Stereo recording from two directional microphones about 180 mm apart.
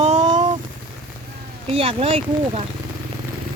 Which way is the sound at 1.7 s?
30° right (ahead or behind).